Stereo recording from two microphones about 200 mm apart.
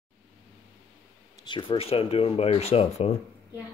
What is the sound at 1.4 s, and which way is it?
Speech, 25° left (ahead or behind).